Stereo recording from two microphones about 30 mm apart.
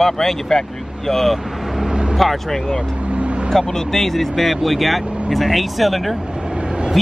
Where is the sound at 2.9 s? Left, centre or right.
Right.